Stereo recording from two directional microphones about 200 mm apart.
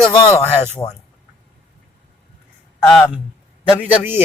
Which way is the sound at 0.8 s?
10° left (ahead or behind).